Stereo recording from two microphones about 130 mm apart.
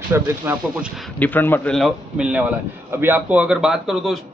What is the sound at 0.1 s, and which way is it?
Speech, 15° right (ahead or behind).